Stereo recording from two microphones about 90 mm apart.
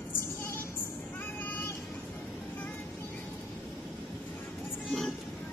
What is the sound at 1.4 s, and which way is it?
Vehicle, 20° left (ahead or behind).